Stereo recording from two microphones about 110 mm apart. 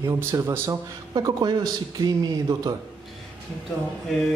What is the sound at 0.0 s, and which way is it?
Speech, 25° right (ahead or behind).